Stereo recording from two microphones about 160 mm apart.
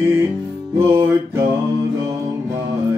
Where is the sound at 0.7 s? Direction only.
15° right (ahead or behind).